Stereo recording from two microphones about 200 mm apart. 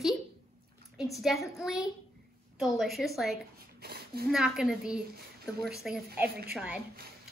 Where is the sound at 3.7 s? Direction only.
50° right (ahead or behind).